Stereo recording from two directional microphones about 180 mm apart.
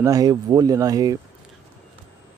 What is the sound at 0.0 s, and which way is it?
Speech, 20° right (ahead or behind).